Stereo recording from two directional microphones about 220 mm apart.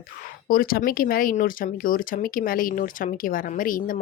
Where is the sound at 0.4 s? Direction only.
40° left (ahead or behind).